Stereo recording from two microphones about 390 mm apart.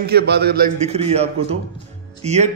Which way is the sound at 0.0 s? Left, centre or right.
Right.